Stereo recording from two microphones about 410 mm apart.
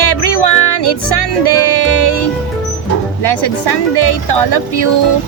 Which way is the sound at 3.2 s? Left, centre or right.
Left.